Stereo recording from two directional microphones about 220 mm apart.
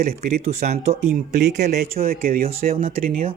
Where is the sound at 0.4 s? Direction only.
30° right (ahead or behind).